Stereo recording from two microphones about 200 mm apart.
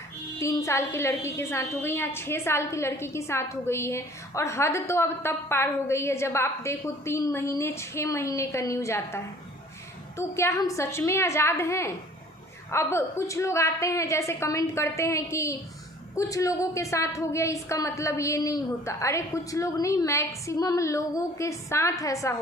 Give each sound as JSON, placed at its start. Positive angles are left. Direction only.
{"t": 0.3, "sound": "a woman's voice", "side_deg": 15}